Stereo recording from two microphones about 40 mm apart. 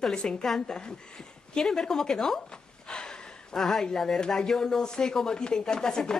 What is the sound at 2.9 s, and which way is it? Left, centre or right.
Gasp, centre.